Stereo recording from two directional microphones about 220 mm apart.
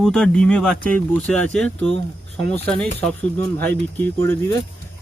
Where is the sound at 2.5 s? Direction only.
5° left (ahead or behind).